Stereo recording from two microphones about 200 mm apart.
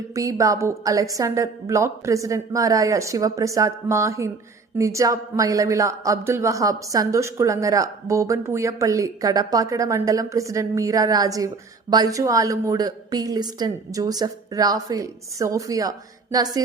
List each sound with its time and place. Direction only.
0.1 s a woman's voice: 15° right (ahead or behind)